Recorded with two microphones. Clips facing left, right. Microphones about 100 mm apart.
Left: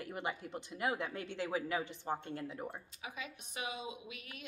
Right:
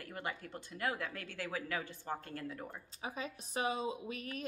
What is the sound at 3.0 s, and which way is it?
Speech, 35° right (ahead or behind).